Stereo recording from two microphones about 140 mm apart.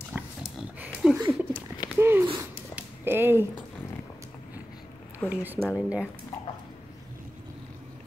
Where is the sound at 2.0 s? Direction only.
15° right (ahead or behind).